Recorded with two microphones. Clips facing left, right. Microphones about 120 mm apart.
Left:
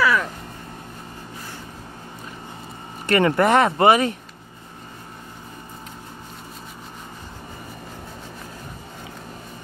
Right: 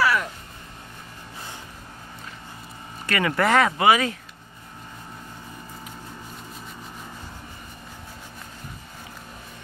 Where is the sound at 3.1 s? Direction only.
30° left (ahead or behind).